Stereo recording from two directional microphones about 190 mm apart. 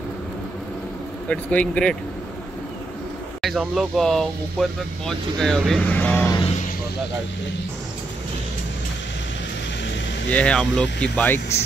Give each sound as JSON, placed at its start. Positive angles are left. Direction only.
{"t": 1.3, "sound": "speech", "side_deg": 5}
{"t": 3.4, "sound": "speech", "side_deg": 0}
{"t": 10.3, "sound": "speech", "side_deg": 5}